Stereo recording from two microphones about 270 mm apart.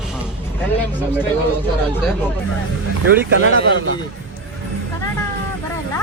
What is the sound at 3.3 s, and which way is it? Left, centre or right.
Speech, right.